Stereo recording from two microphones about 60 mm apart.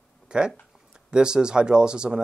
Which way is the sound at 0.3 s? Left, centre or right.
Centre.